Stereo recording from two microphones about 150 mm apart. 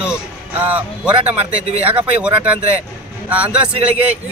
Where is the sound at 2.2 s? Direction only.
10° right (ahead or behind).